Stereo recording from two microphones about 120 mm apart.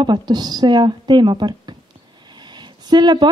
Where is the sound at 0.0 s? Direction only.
40° right (ahead or behind).